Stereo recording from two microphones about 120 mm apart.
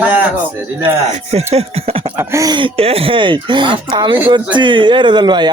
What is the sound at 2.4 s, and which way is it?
Speech, 40° right (ahead or behind).